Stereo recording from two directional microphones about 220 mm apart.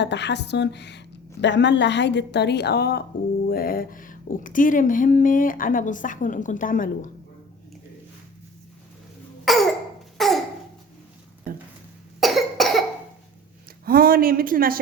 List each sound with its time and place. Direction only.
0.0 s a woman's voice: 50° left (ahead or behind)
9.4 s cough: centre (ahead or behind)
10.2 s a sound: centre (ahead or behind)
12.2 s cough: centre (ahead or behind)
13.8 s speech: 40° right (ahead or behind)